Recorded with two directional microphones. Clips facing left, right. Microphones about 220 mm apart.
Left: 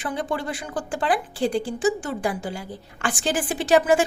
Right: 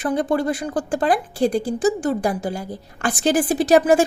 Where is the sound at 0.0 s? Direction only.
40° right (ahead or behind).